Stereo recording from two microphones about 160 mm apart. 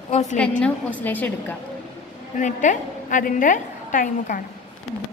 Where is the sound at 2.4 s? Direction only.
50° left (ahead or behind).